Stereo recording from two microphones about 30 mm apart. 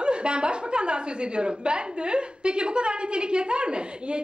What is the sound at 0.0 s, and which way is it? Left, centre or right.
A woman's voice, right.